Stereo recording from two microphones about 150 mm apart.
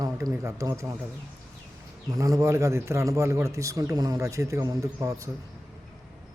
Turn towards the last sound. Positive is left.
turn(degrees=-20)  # may be behind; listen again after turning